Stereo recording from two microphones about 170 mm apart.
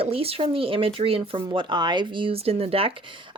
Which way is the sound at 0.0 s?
35° right (ahead or behind).